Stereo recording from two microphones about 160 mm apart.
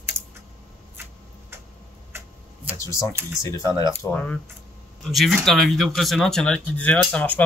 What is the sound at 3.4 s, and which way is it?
Speech, 20° left (ahead or behind).